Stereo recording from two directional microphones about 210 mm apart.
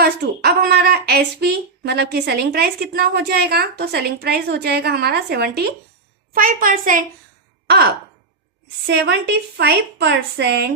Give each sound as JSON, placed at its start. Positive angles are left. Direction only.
{"t": 0.0, "sound": "a woman's voice", "side_deg": -50}
{"t": 8.9, "sound": "a woman's voice", "side_deg": -55}